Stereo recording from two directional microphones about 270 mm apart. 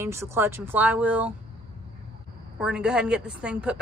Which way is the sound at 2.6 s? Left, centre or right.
Centre.